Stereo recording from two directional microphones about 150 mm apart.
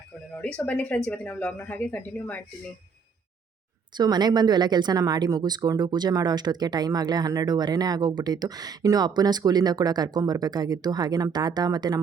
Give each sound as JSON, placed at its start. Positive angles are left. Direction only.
{"t": 0.4, "sound": "speech", "side_deg": 10}
{"t": 3.9, "sound": "speech", "side_deg": -25}